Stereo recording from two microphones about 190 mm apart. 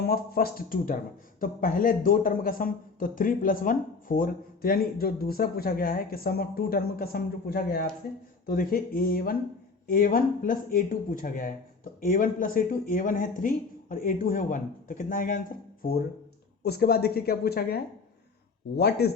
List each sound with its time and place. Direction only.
0.0 s speech: 55° left (ahead or behind)
18.8 s speech: 60° left (ahead or behind)